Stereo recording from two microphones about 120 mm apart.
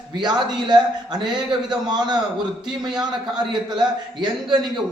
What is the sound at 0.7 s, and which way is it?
A man's voice, 35° right (ahead or behind).